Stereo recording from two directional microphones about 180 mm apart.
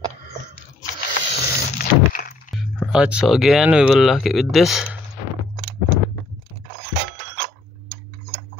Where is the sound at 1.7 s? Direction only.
55° left (ahead or behind).